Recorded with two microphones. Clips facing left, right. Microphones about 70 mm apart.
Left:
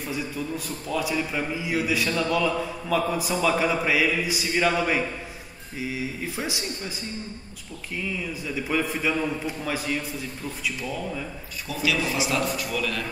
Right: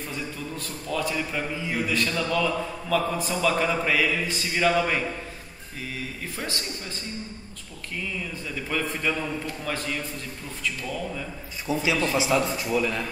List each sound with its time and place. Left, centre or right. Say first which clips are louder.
0.1 s a man's voice: left 7 dB; centre
8.5 s a man's voice: left 3 dB; centre
11.6 s speech: right 2 dB; right